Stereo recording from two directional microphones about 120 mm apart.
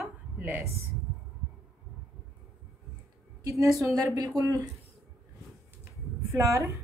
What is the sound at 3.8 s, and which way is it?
Speech, 30° right (ahead or behind).